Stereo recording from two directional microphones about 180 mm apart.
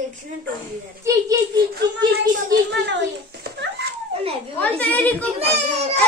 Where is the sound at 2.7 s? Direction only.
75° right (ahead or behind).